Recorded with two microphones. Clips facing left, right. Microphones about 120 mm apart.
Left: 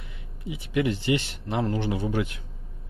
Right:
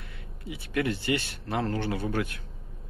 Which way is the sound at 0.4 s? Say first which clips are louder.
Left 3 dB; 20° left (ahead or behind).